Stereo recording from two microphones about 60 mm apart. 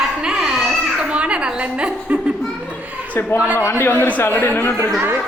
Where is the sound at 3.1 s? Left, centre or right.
Left.